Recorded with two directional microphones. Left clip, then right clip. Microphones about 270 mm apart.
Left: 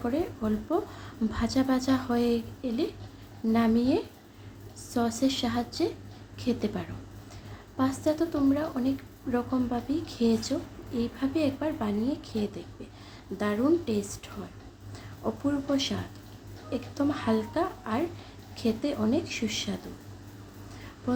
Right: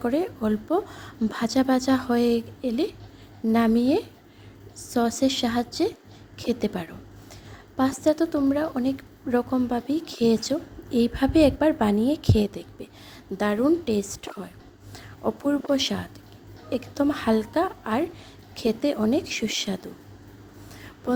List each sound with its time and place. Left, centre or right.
0.0 s speech: right